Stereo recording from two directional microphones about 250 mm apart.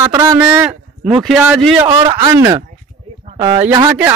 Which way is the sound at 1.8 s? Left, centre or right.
Centre.